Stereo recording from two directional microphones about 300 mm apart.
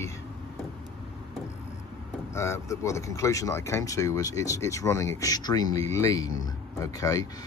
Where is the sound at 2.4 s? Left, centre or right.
Centre.